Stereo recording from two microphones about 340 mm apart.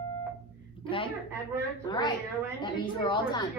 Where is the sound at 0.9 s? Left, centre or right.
Centre.